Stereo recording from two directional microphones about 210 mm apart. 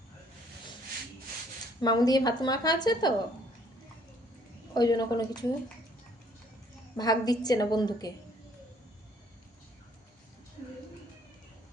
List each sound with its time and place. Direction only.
1.8 s a woman's voice: 20° left (ahead or behind)
4.7 s a woman's voice: 20° left (ahead or behind)
6.9 s a woman's voice: 20° left (ahead or behind)